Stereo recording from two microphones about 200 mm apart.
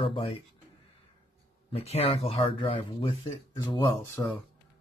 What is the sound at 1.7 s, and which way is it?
Speech, 30° left (ahead or behind).